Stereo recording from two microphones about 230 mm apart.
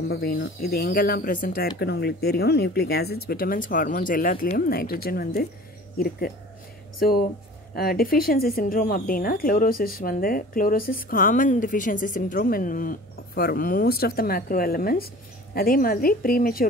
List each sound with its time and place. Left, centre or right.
0.1 s speech: left